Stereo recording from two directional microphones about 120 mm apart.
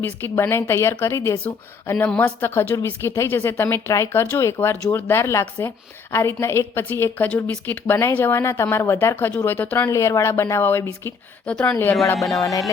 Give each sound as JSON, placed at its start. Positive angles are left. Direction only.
{"t": 0.0, "sound": "speech", "side_deg": 20}
{"t": 9.9, "sound": "speech", "side_deg": 25}
{"t": 11.4, "sound": "speech", "side_deg": 10}
{"t": 12.4, "sound": "speech", "side_deg": 30}